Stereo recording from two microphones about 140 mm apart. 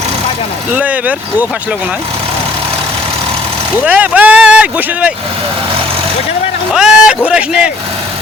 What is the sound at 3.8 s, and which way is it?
Speech, 10° right (ahead or behind).